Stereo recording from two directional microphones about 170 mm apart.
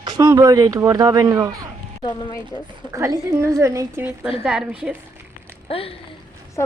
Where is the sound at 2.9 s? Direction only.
20° right (ahead or behind).